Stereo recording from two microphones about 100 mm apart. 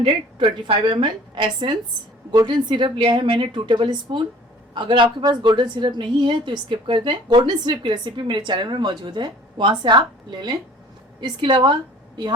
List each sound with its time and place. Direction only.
0.0 s a woman's voice: 55° right (ahead or behind)